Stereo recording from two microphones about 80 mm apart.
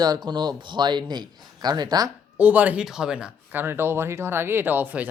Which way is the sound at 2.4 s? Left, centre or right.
Centre.